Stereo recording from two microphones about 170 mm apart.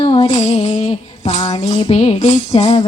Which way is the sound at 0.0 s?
35° left (ahead or behind).